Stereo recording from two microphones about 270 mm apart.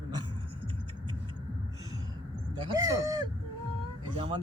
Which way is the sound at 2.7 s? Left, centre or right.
Centre.